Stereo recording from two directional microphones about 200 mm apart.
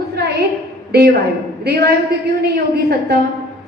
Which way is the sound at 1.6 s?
50° right (ahead or behind).